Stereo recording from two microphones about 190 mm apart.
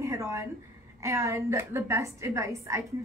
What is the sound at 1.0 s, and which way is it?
A woman's voice, 15° right (ahead or behind).